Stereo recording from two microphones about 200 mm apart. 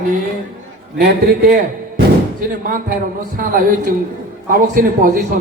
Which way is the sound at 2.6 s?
45° right (ahead or behind).